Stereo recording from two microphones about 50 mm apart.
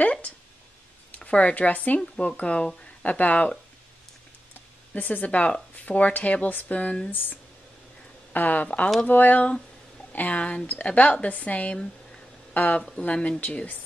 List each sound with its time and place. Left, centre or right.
0.0 s a sound: left
1.2 s speech: left
2.0 s speech: centre; by 3.5 s left
4.9 s speech: left
7.1 s speech: left